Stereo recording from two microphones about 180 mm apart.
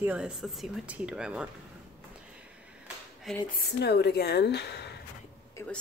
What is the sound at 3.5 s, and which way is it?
Speech, 65° left (ahead or behind).